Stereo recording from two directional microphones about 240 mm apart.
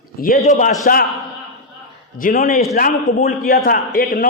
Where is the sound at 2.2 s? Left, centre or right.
Left.